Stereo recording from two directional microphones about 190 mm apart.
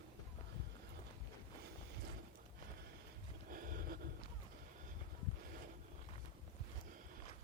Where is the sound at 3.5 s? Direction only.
45° right (ahead or behind).